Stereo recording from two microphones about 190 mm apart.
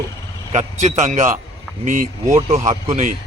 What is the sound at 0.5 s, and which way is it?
Speech, 40° right (ahead or behind).